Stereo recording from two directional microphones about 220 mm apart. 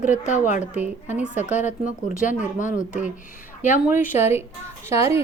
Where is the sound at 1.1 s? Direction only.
5° right (ahead or behind).